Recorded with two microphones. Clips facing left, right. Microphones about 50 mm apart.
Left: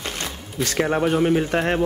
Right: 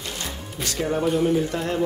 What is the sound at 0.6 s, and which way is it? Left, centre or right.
Speech, left.